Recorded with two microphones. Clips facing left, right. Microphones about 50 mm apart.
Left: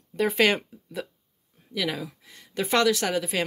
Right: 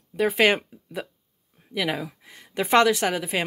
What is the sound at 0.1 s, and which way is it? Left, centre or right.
Speech, centre.